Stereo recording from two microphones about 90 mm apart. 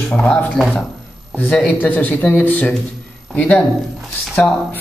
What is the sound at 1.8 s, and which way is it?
A man's voice, 15° left (ahead or behind).